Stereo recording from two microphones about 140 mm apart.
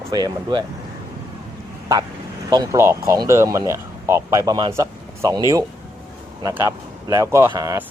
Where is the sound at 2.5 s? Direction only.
25° right (ahead or behind).